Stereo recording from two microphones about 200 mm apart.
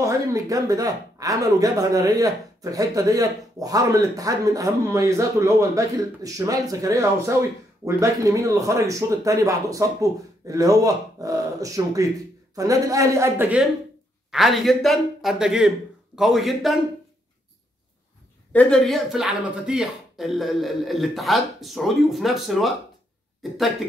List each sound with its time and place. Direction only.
0.0 s speech: 15° right (ahead or behind)
18.5 s speech: 5° left (ahead or behind)